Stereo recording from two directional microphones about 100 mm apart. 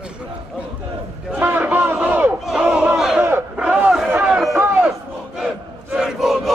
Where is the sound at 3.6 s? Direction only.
10° right (ahead or behind).